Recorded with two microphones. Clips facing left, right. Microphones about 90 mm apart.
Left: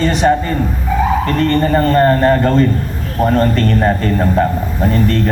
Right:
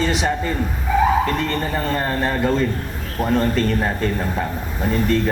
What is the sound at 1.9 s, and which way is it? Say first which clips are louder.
Speech: left 12 dB; 65° left (ahead or behind).